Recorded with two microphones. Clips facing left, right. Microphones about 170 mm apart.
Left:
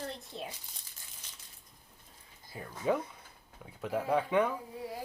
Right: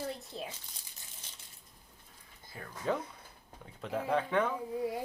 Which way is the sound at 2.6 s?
10° left (ahead or behind).